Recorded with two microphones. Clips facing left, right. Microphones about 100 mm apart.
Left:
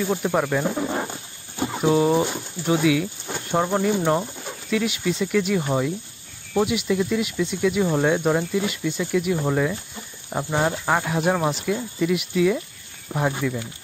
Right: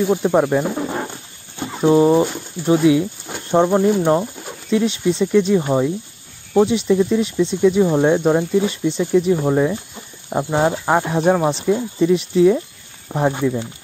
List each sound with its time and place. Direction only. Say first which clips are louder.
0.0 s speech: right 6 dB; 20° right (ahead or behind)
0.7 s a sound: right 2 dB; 5° right (ahead or behind)
1.9 s speech: right 6 dB; 25° right (ahead or behind)
4.6 s speech: right 6 dB; 25° right (ahead or behind)